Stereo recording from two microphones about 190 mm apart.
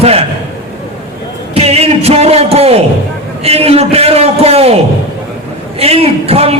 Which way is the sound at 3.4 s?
30° right (ahead or behind).